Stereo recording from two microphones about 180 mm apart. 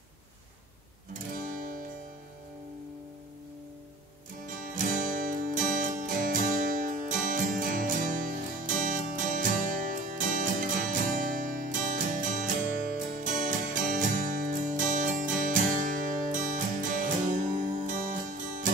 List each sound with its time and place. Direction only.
1.3 s guitar: 45° right (ahead or behind)
4.5 s music: 45° right (ahead or behind)